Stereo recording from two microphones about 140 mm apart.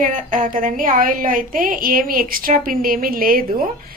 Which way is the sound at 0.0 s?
70° right (ahead or behind).